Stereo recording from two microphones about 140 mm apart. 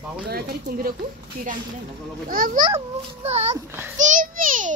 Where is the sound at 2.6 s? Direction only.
50° right (ahead or behind).